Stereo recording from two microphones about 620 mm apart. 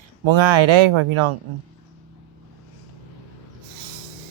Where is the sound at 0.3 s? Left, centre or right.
Right.